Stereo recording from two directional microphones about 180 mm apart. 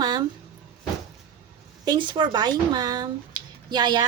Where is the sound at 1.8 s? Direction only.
25° right (ahead or behind).